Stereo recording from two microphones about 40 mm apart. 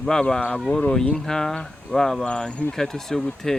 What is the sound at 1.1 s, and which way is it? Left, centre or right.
Speech, centre.